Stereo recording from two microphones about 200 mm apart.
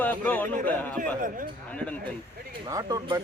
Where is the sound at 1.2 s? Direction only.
45° right (ahead or behind).